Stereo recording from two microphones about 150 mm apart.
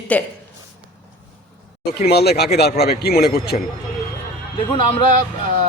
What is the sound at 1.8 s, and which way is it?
A man's voice, 90° left.